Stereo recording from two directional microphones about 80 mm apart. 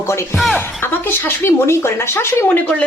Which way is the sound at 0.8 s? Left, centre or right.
Left.